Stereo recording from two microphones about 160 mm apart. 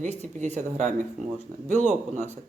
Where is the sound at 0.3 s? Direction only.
45° right (ahead or behind).